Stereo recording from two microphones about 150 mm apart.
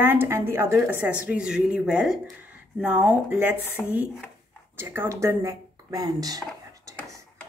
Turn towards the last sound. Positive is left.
turn(degrees=-25)  # may be behind; listen again after turning